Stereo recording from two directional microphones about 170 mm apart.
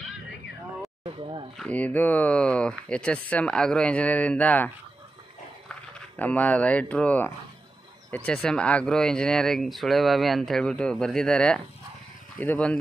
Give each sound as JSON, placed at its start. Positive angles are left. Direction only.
{"t": 1.0, "sound": "speech", "side_deg": -30}
{"t": 1.6, "sound": "speech", "side_deg": 10}
{"t": 5.7, "sound": "speech", "side_deg": 5}